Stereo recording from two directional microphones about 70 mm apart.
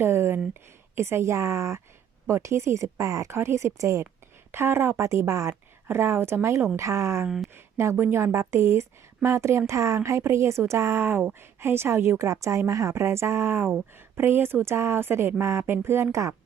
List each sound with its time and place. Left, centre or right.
0.0 s a sound: right
0.9 s speech: right
3.3 s speech: right
4.5 s a woman's voice: right
7.3 s speech: centre
7.5 s a woman's voice: right